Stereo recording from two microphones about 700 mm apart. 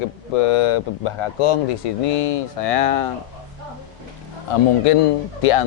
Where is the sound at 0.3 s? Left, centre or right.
Left.